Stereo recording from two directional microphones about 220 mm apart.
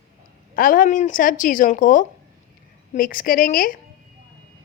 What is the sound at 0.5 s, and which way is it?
A woman's voice, 40° left (ahead or behind).